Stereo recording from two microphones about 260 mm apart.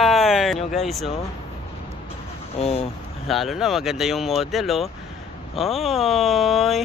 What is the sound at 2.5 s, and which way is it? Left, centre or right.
Speech, left.